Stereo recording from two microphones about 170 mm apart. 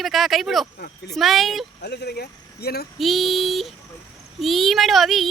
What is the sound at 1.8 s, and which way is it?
Speech, 75° left (ahead or behind).